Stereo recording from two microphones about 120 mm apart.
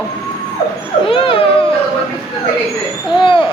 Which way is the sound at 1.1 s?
45° left (ahead or behind).